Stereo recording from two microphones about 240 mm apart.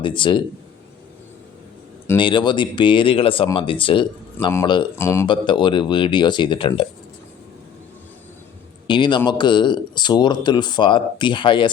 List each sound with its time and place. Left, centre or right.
0.0 s speech: left
2.0 s speech: centre
8.9 s speech: centre